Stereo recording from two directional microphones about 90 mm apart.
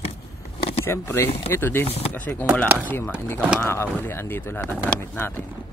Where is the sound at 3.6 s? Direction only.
30° left (ahead or behind).